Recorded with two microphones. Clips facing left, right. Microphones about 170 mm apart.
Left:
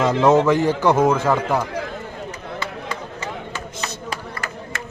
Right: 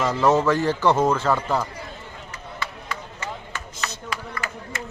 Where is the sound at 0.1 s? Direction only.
20° left (ahead or behind).